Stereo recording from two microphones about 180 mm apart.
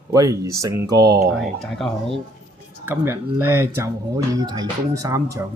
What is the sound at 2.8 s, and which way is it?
Speech, 10° right (ahead or behind).